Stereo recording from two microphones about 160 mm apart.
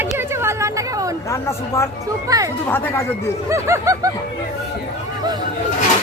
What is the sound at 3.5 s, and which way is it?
Speech, 20° right (ahead or behind).